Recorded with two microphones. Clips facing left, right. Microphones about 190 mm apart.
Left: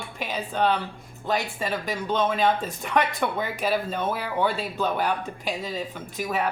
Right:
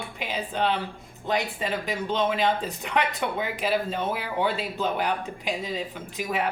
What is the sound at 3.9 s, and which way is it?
Speech, 20° right (ahead or behind).